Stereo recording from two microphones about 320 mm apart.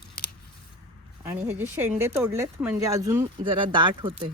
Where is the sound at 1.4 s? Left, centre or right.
Centre.